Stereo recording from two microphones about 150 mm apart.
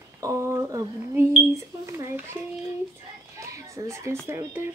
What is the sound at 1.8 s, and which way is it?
Speech, 20° right (ahead or behind).